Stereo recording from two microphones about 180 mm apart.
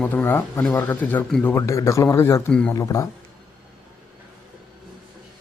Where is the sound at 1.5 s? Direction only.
15° left (ahead or behind).